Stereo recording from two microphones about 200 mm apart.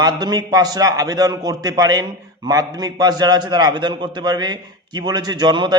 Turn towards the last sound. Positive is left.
turn(degrees=-20)  # may be behind; listen again after turning